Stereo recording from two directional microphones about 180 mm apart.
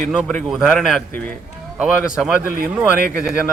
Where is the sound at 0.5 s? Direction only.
Centre (ahead or behind).